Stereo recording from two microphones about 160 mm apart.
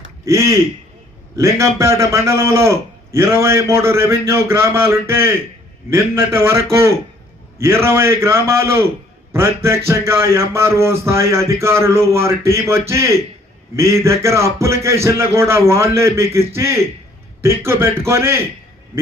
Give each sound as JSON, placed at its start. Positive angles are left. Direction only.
{"t": 0.3, "sound": "a man's voice", "side_deg": -20}